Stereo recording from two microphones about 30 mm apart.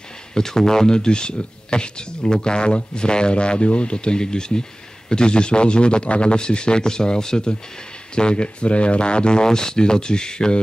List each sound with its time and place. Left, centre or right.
0.3 s a man's voice: centre